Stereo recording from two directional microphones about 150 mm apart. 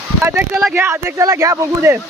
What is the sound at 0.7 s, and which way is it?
Speech, 15° right (ahead or behind).